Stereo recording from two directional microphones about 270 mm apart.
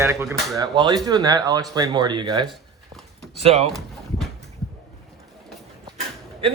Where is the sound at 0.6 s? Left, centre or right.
Centre.